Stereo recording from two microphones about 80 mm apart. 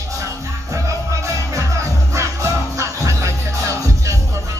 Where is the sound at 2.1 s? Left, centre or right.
Right.